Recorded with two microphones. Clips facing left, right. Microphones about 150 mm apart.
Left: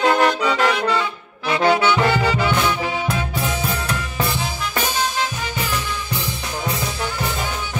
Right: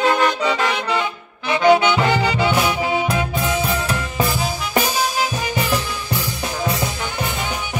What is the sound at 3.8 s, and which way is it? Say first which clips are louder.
Music: right 2 dB; 5° right (ahead or behind).